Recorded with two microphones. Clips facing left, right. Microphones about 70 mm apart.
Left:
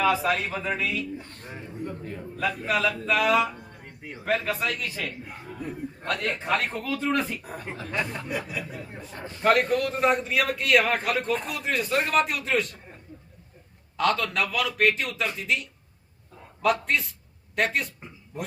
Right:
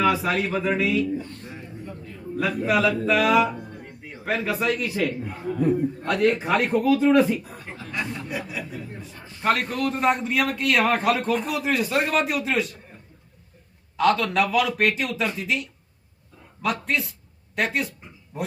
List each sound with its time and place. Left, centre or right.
0.0 s a man's voice: centre
2.3 s a man's voice: centre
7.4 s a man's voice: left
8.0 s a man's voice: centre
9.0 s a man's voice: left
9.4 s a man's voice: centre
13.9 s a man's voice: centre
16.8 s a woman's voice: centre